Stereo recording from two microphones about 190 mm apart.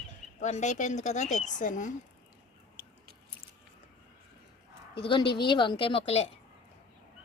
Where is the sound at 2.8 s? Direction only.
10° right (ahead or behind).